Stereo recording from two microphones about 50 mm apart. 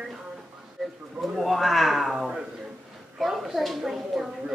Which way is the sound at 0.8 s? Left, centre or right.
Centre.